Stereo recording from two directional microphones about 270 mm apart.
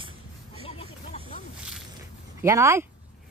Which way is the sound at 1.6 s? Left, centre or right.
Centre.